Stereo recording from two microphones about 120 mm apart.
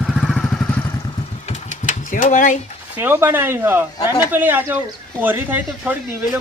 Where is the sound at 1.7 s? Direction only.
90° left.